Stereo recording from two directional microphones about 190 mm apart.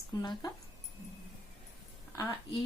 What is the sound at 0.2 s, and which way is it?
Speech, 20° left (ahead or behind).